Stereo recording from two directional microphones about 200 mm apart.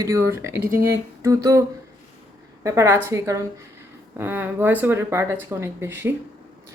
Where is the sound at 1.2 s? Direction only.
15° right (ahead or behind).